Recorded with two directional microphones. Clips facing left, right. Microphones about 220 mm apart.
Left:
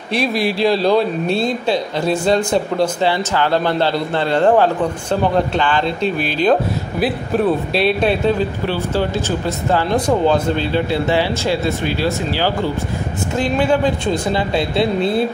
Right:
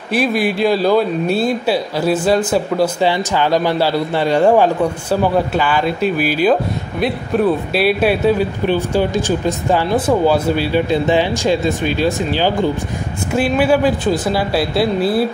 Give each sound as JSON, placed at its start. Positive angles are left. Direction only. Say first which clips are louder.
{"t": 0.1, "sound": "a man's voice", "louder": "right 2 dB", "side_deg": 0}
{"t": 13.4, "sound": "speech", "louder": "right 2 dB", "side_deg": -5}